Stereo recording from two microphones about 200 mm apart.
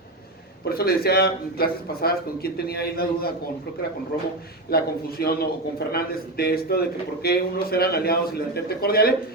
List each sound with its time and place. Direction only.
0.6 s a man's voice: 50° left (ahead or behind)
4.7 s a man's voice: 50° left (ahead or behind)